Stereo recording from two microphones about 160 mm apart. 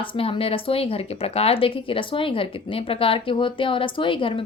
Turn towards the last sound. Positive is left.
turn(degrees=35)  # may be behind; listen again after turning